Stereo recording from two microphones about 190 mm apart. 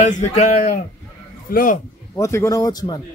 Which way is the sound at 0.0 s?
35° left (ahead or behind).